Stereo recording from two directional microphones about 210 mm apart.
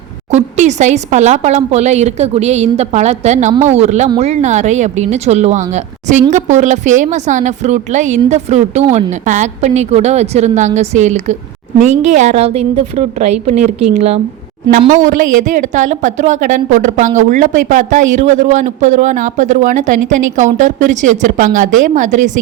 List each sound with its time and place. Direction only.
0.3 s a man's voice: 35° right (ahead or behind)